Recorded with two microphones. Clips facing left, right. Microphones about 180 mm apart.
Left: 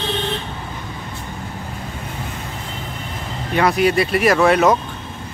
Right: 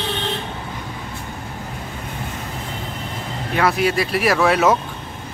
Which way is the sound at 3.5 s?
Centre (ahead or behind).